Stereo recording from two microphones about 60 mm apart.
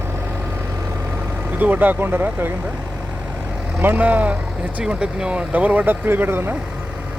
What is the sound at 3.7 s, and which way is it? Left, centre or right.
Speech, right.